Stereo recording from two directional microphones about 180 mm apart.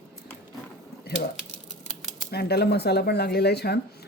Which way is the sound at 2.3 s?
65° left (ahead or behind).